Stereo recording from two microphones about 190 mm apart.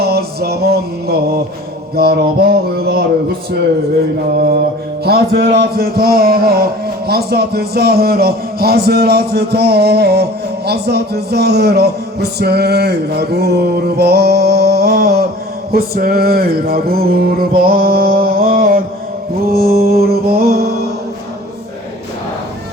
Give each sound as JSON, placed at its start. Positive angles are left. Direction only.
{"t": 0.0, "sound": "music", "side_deg": -55}
{"t": 2.0, "sound": "speech", "side_deg": -55}
{"t": 5.0, "sound": "a sound", "side_deg": -55}
{"t": 7.1, "sound": "speech", "side_deg": -55}
{"t": 15.7, "sound": "a sound", "side_deg": -55}
{"t": 19.5, "sound": "music", "side_deg": -55}